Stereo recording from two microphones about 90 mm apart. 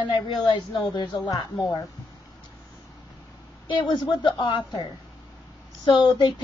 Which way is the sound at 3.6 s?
60° left (ahead or behind).